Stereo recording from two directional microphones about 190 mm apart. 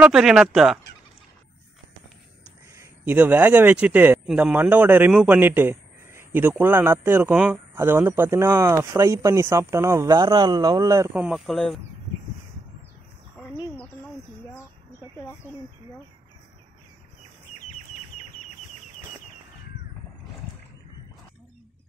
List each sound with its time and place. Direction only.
0.0 s speech: centre (ahead or behind)
2.7 s speech: 15° right (ahead or behind)
11.1 s speech: 5° right (ahead or behind)
15.1 s a sound: 15° left (ahead or behind)